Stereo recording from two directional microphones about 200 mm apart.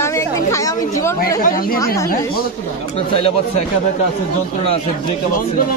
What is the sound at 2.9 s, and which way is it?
Speech, 30° left (ahead or behind).